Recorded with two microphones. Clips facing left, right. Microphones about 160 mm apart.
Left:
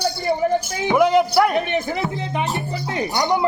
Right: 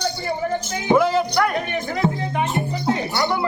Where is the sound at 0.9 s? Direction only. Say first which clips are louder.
Left 4 dB; 15° left (ahead or behind).